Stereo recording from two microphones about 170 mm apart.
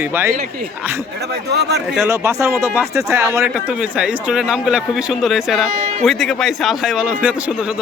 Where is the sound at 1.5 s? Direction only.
80° right.